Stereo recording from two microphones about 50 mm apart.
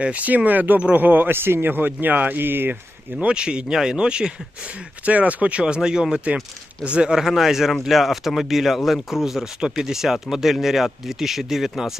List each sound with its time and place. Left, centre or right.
0.0 s speech: right
3.2 s speech: right
5.0 s speech: right; by 11.9 s centre